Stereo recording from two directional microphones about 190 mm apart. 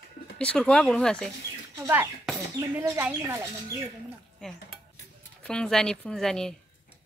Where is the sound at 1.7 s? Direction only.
15° right (ahead or behind).